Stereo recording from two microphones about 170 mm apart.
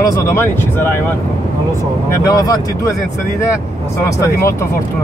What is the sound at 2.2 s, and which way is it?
Speech, 20° left (ahead or behind).